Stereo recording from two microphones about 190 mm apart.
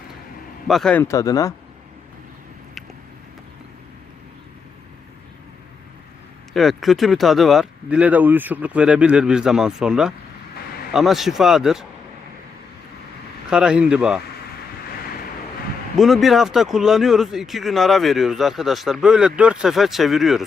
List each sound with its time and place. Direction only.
0.7 s speech: 5° left (ahead or behind)
6.5 s speech: centre (ahead or behind)
13.5 s speech: 5° right (ahead or behind)
16.0 s speech: centre (ahead or behind)